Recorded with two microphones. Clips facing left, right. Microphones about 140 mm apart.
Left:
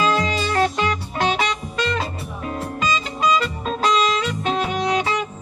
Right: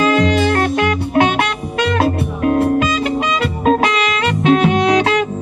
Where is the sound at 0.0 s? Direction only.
60° right (ahead or behind).